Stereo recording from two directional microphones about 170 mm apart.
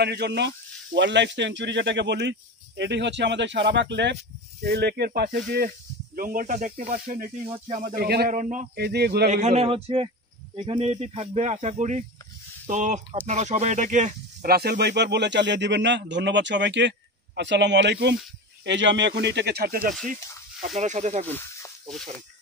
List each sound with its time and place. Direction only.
0.0 s speech: 80° right
4.6 s speech: 70° right (ahead or behind)
6.1 s speech: 55° right (ahead or behind)
7.5 s speech: 35° right (ahead or behind)
7.8 s speech: 60° right (ahead or behind)
8.3 s speech: 50° right (ahead or behind)
8.7 s speech: 70° right (ahead or behind)
9.3 s a man's voice: 40° right (ahead or behind)
14.5 s speech: 70° right (ahead or behind)
20.7 s speech: 45° right (ahead or behind)
21.3 s a sound: 15° left (ahead or behind)